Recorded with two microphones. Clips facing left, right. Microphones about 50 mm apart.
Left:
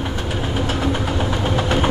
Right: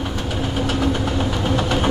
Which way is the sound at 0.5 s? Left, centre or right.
Centre.